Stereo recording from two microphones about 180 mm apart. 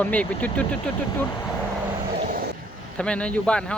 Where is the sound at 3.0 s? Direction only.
5° left (ahead or behind).